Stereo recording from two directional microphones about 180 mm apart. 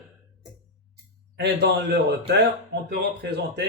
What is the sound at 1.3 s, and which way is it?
Speech, 65° right (ahead or behind).